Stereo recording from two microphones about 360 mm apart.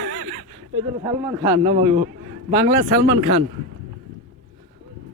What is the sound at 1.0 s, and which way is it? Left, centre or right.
Speech, centre.